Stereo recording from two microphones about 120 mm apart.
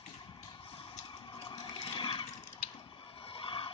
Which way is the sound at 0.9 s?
35° left (ahead or behind).